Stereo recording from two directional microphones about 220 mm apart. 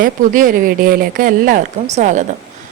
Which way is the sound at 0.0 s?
40° right (ahead or behind).